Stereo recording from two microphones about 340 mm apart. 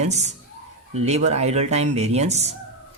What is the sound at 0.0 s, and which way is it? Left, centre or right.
A man's voice, centre.